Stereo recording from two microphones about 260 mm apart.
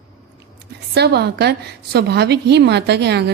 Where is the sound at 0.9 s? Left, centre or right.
Right.